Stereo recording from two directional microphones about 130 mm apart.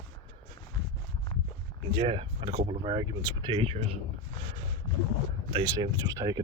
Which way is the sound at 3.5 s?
45° right (ahead or behind).